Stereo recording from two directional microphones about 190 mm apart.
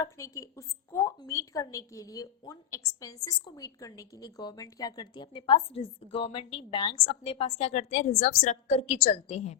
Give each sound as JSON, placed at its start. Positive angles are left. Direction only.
{"t": 0.0, "sound": "a woman's voice", "side_deg": 15}